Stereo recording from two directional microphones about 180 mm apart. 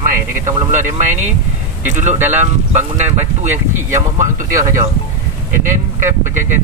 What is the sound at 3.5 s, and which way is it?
Speech, 15° right (ahead or behind).